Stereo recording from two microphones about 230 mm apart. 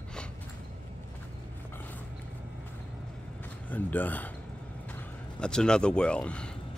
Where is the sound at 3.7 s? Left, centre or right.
Centre.